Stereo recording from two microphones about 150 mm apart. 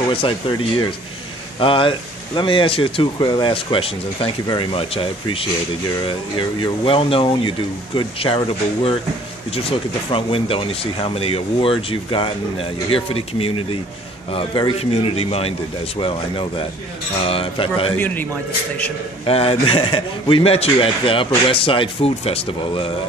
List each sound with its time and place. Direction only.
0.1 s speech: 35° left (ahead or behind)
17.9 s a man's voice: 10° left (ahead or behind)
19.2 s speech: 40° left (ahead or behind)